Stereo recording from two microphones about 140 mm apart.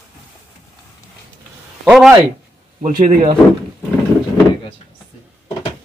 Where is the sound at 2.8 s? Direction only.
50° right (ahead or behind).